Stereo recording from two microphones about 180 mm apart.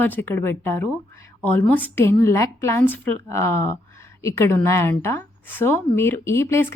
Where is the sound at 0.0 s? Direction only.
10° left (ahead or behind).